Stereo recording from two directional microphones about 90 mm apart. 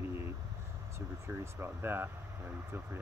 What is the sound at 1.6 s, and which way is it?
Speech, 25° right (ahead or behind).